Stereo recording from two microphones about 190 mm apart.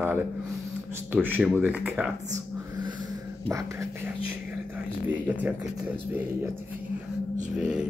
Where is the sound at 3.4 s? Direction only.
15° right (ahead or behind).